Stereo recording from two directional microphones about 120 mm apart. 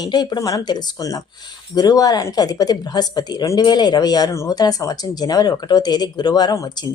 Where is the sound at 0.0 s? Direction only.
35° left (ahead or behind).